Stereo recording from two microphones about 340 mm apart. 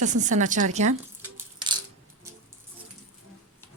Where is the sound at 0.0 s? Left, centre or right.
Right.